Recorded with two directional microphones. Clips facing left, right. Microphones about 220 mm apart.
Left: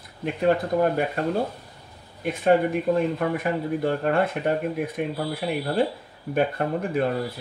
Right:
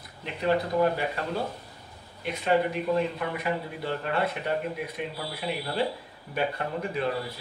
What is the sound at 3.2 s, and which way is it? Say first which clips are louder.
Speech: left 5 dB; 50° left (ahead or behind).